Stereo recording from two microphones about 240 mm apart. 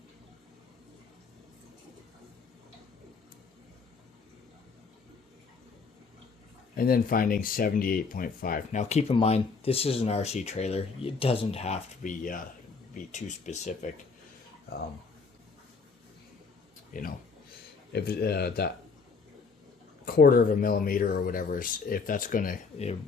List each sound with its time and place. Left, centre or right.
6.7 s speech: left
16.9 s speech: left
20.1 s speech: left